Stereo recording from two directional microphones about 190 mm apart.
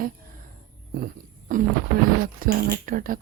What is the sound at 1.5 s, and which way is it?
Speech, 45° right (ahead or behind).